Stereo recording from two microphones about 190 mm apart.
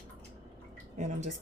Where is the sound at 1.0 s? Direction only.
40° right (ahead or behind).